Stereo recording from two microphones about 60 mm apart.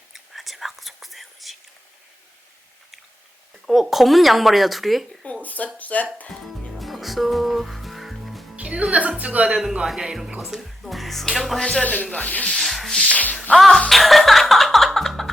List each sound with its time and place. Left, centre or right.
0.1 s whispering: centre
3.7 s speech: centre
5.2 s a sound: left
5.7 s speech: left
6.7 s music: centre
8.5 s a woman's voice: centre
9.6 s speech: centre
11.6 s speech: centre
12.5 s rub: centre
13.3 s music: centre
13.6 s speech: centre
13.9 s music: centre